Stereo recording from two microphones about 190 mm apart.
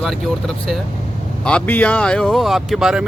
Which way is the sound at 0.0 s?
Centre (ahead or behind).